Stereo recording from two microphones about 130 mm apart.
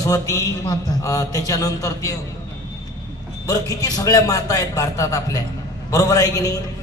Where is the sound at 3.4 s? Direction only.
30° left (ahead or behind).